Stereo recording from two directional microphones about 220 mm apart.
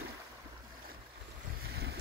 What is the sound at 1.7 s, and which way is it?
Boat, 45° right (ahead or behind).